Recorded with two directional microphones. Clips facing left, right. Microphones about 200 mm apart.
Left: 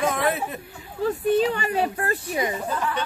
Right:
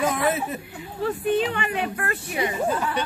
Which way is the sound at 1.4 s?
40° left (ahead or behind).